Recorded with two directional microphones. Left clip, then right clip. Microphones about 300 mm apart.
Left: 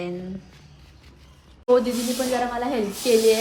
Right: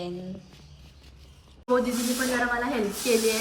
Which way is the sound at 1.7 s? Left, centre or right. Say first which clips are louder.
Left 5 dB; centre.